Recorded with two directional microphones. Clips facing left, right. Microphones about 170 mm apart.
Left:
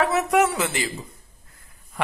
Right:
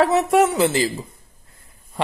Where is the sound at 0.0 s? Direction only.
30° right (ahead or behind).